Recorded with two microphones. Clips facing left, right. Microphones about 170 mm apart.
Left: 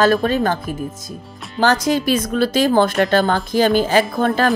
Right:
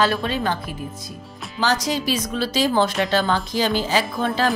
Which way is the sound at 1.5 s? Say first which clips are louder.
Left 6 dB; 55° left (ahead or behind).